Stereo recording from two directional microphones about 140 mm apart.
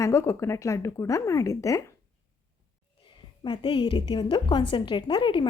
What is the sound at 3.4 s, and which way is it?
A woman's voice, 35° left (ahead or behind).